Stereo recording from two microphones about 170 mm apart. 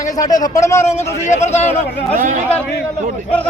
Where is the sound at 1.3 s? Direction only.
40° left (ahead or behind).